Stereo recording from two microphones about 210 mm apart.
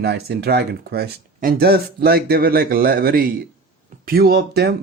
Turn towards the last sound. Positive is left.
turn(degrees=-50)  # may be behind; listen again after turning